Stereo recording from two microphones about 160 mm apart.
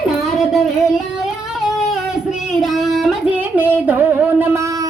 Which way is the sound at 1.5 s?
5° right (ahead or behind).